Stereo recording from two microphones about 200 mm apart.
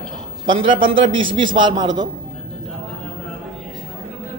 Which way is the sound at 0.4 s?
25° right (ahead or behind).